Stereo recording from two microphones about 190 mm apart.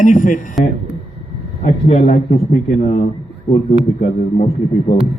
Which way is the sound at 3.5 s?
15° left (ahead or behind).